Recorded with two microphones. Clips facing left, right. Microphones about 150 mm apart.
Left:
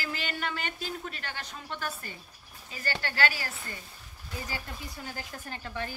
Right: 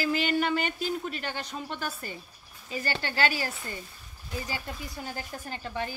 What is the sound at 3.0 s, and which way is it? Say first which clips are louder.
Speech: right 2 dB; 20° right (ahead or behind).